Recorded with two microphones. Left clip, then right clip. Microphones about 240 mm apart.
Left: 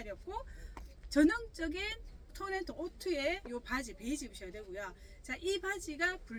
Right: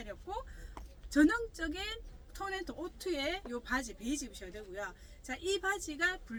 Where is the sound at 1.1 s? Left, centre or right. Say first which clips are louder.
Right 1 dB; centre.